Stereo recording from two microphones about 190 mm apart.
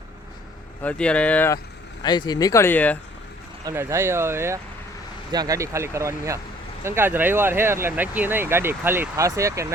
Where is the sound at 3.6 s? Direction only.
15° right (ahead or behind).